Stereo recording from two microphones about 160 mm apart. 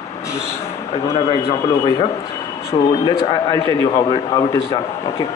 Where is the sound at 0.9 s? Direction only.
40° left (ahead or behind); by 5.3 s 25° left (ahead or behind).